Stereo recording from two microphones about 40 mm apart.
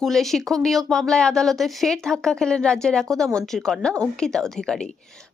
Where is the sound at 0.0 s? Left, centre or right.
Centre.